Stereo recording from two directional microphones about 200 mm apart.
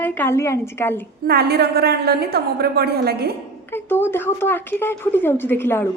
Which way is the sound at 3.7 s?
10° left (ahead or behind).